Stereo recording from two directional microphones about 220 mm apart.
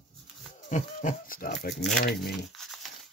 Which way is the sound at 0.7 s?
35° left (ahead or behind).